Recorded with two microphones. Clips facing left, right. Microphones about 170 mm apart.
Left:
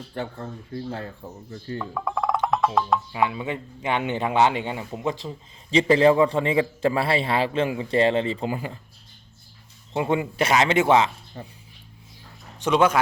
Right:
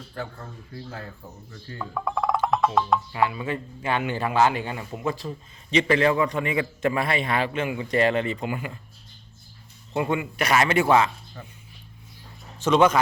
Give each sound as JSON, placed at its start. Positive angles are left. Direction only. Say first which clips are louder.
{"t": 0.1, "sound": "a man's voice", "louder": "left 4 dB", "side_deg": 25}
{"t": 1.8, "sound": "speech", "louder": "right 1 dB", "side_deg": 0}
{"t": 3.1, "sound": "a man's voice", "louder": "even", "side_deg": 20}
{"t": 9.9, "sound": "a man's voice", "louder": "left 2 dB", "side_deg": 25}
{"t": 12.6, "sound": "speech", "louder": "right 1 dB", "side_deg": 10}